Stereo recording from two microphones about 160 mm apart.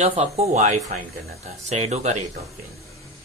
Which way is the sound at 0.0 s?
40° right (ahead or behind).